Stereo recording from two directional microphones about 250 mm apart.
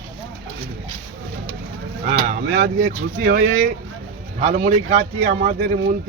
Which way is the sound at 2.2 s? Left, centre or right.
Right.